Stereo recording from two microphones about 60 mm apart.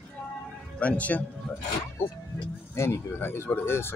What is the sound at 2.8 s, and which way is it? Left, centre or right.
Speech, left.